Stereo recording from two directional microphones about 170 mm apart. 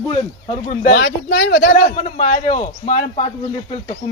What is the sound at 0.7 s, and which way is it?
A man's voice, 55° left (ahead or behind).